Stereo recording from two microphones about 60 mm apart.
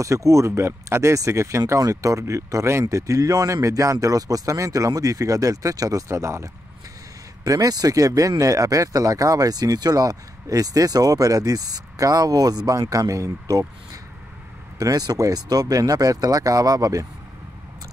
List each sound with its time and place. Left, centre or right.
0.0 s speech: right
1.8 s speech: right
7.4 s speech: right
14.8 s speech: right